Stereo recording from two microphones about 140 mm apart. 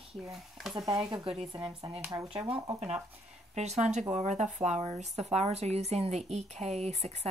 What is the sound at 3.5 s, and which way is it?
A woman's voice, 55° right (ahead or behind).